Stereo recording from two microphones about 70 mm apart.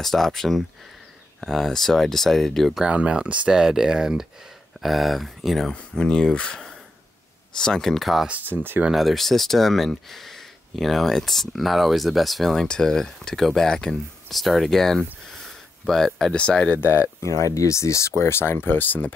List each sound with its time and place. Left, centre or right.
0.0 s speech: centre
2.8 s speech: centre
8.3 s speech: right
8.9 s speech: centre
16.3 s speech: centre
16.8 s speech: left